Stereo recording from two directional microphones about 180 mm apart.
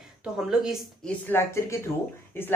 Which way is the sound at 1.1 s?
10° left (ahead or behind).